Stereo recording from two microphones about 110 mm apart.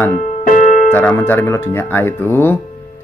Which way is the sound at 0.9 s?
20° left (ahead or behind).